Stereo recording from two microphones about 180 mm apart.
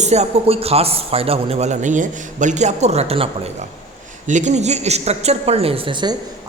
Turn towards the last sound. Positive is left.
turn(degrees=-25)  # may be behind; listen again after turning